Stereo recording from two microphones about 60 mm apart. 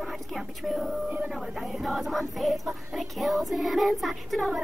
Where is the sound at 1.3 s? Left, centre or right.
Centre.